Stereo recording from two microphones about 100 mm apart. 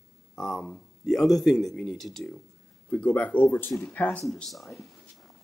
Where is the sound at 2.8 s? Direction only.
15° left (ahead or behind).